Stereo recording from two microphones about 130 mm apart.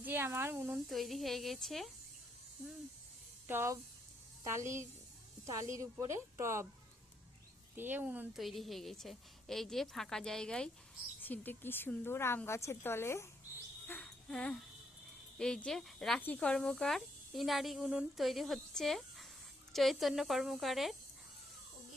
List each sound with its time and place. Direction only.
0.0 s speech: 15° right (ahead or behind)
0.9 s speech: centre (ahead or behind)
3.4 s speech: 20° right (ahead or behind)
7.8 s speech: 15° right (ahead or behind)
8.4 s a woman's voice: centre (ahead or behind); by 13.2 s 20° left (ahead or behind)
13.8 s a sound: 10° left (ahead or behind)
15.4 s speech: 5° left (ahead or behind)